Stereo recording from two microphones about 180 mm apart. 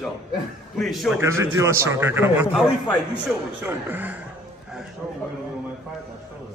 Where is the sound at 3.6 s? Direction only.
10° right (ahead or behind).